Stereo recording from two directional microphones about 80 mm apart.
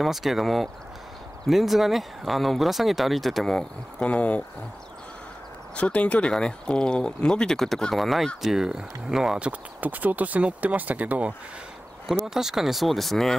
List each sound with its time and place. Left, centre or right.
0.0 s speech: centre
4.0 s speech: centre
5.8 s speech: centre
9.5 s speech: right
12.4 s speech: centre